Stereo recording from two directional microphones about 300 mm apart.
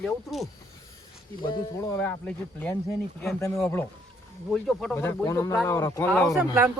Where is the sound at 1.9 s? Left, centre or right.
Centre.